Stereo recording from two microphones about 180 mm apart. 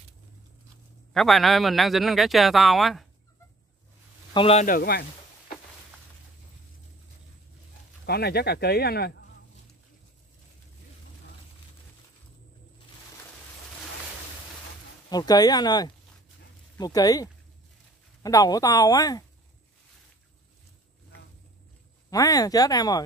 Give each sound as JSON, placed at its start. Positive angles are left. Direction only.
{"t": 1.1, "sound": "speech", "side_deg": 0}
{"t": 4.3, "sound": "speech", "side_deg": 30}
{"t": 4.6, "sound": "speech", "side_deg": 55}
{"t": 8.0, "sound": "speech", "side_deg": 65}
{"t": 15.0, "sound": "speech", "side_deg": 20}
{"t": 22.1, "sound": "speech", "side_deg": 20}